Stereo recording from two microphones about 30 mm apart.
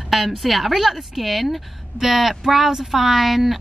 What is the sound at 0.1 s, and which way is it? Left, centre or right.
A woman's voice, centre.